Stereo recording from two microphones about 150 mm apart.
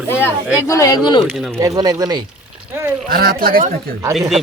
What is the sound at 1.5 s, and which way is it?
Speech, 25° right (ahead or behind).